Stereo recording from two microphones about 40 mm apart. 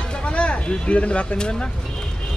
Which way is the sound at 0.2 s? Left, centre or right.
Left.